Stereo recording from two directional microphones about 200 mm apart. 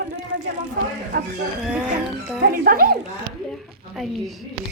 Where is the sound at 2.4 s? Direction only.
50° right (ahead or behind).